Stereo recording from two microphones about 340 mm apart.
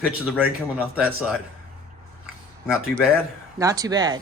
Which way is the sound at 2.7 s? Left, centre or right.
Centre.